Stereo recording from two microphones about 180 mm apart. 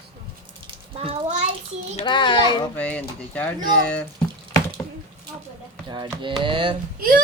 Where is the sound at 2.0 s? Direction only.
25° left (ahead or behind).